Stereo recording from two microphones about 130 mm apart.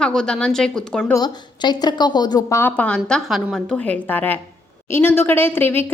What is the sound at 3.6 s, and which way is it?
A woman's voice, 10° left (ahead or behind).